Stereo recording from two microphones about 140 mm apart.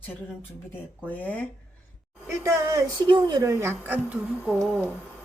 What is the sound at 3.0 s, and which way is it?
A woman's voice, 35° right (ahead or behind).